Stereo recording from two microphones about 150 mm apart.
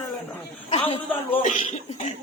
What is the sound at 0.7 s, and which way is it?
A man's voice, 35° left (ahead or behind).